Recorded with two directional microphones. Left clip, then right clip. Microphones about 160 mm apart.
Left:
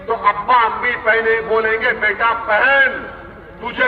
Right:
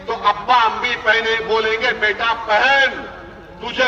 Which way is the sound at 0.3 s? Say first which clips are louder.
Left 1 dB; 25° right (ahead or behind).